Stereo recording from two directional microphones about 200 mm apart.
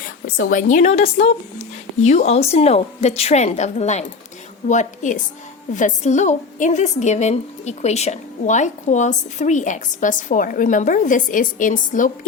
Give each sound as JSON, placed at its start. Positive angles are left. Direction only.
{"t": 0.3, "sound": "a woman's voice", "side_deg": 40}